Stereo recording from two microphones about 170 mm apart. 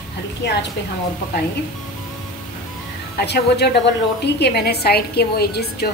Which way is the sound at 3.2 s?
75° left (ahead or behind).